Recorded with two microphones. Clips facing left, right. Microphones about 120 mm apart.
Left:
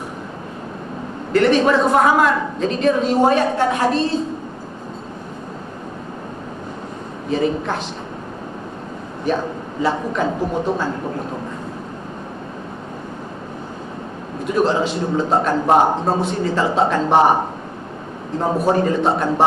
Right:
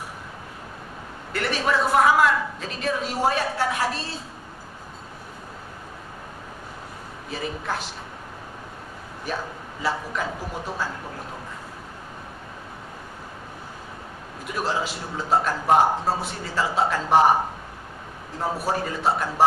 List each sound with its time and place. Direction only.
1.3 s a man's voice: 5° right (ahead or behind)
1.6 s a man's voice: 25° left (ahead or behind)
7.3 s a man's voice: 25° left (ahead or behind)
9.8 s a man's voice: 25° left (ahead or behind)
14.5 s a man's voice: 25° left (ahead or behind)
18.6 s a man's voice: 25° left (ahead or behind)